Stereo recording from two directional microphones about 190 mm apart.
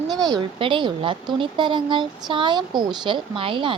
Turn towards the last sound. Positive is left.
turn(degrees=-25)  # may be behind; listen again after turning